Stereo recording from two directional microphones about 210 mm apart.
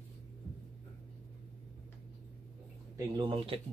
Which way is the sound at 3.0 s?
25° right (ahead or behind).